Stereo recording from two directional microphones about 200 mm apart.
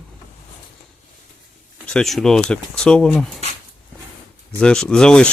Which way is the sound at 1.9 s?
5° left (ahead or behind).